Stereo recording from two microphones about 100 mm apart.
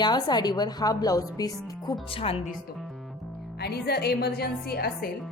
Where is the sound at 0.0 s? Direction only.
45° left (ahead or behind).